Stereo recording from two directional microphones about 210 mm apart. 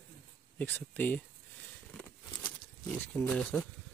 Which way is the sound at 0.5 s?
10° left (ahead or behind).